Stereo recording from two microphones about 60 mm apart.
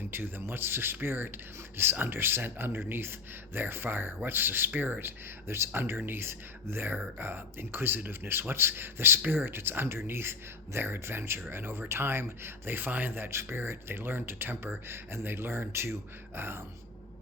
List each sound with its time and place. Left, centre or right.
0.1 s a man's voice: right